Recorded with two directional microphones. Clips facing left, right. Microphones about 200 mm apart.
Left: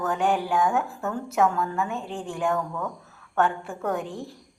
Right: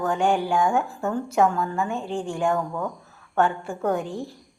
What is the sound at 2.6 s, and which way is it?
Speech, 25° right (ahead or behind).